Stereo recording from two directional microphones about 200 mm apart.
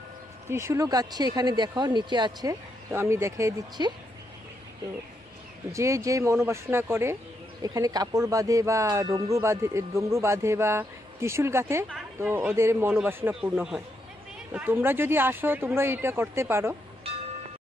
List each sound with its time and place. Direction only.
0.5 s speech: 15° right (ahead or behind)
5.7 s speech: 15° right (ahead or behind)